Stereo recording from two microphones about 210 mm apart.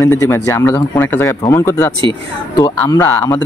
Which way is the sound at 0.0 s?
15° left (ahead or behind).